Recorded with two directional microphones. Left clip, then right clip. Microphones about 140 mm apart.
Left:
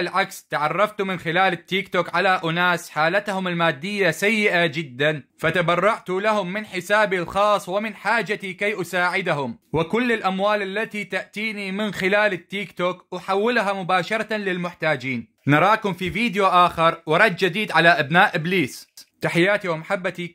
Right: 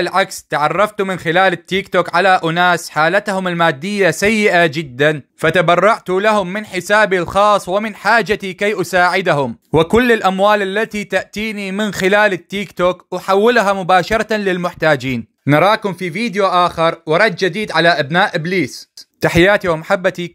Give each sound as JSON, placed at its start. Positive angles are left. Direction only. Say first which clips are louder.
{"t": 0.0, "sound": "speech", "louder": "right 7 dB", "side_deg": -40}
{"t": 15.5, "sound": "speech", "louder": "right 5 dB", "side_deg": -25}
{"t": 19.2, "sound": "speech", "louder": "right 8 dB", "side_deg": -50}